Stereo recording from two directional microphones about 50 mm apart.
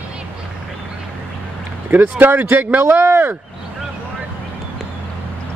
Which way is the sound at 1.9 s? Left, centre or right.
Right.